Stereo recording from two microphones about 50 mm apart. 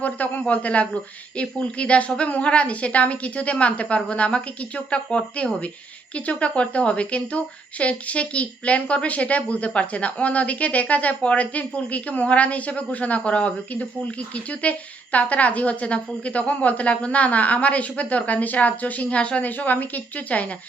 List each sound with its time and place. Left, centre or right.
0.0 s a woman's voice: left
19.5 s a woman's voice: left